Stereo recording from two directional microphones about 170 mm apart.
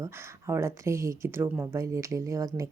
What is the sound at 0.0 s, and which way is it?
Speech, 15° right (ahead or behind).